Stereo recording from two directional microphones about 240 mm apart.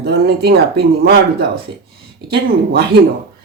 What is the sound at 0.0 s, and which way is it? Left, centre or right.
Speech, right.